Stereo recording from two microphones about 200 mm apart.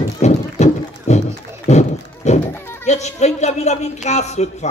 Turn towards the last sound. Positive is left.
turn(degrees=35)  # may be behind; listen again after turning